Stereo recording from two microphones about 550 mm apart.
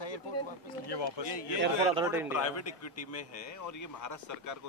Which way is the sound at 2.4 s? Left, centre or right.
Left.